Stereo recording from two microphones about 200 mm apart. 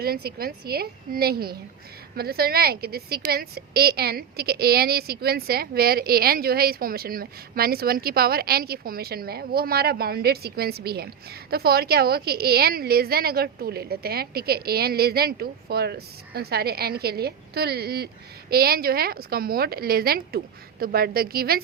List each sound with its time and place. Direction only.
0.0 s a woman's voice: 50° right (ahead or behind)